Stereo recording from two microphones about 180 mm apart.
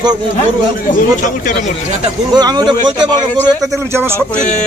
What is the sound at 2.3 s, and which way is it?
Speech, 25° right (ahead or behind).